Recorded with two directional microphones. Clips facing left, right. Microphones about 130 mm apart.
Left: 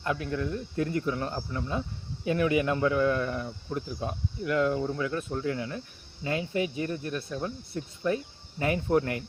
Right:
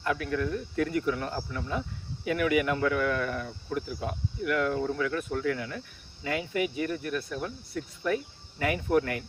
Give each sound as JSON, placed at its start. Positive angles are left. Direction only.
{"t": 0.0, "sound": "speech", "side_deg": 25}